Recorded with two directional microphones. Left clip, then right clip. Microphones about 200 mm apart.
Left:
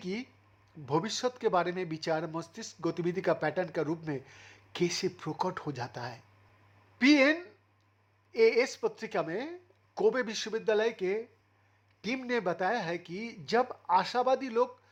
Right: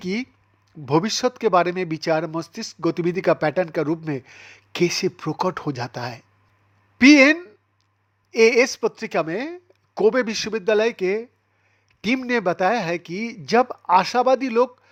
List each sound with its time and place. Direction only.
0.0 s speech: 30° right (ahead or behind)